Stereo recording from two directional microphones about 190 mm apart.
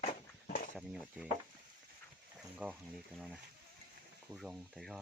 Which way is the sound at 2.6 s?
5° right (ahead or behind).